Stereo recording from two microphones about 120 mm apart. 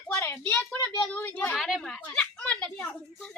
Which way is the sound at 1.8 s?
10° left (ahead or behind).